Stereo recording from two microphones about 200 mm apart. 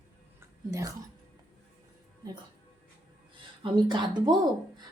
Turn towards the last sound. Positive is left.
turn(degrees=-25)  # may be behind; listen again after turning